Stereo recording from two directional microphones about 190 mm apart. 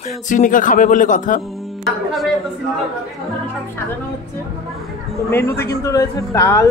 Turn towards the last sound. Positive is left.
turn(degrees=15)  # may be behind; listen again after turning